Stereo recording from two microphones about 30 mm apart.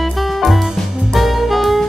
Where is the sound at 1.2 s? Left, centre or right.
Centre.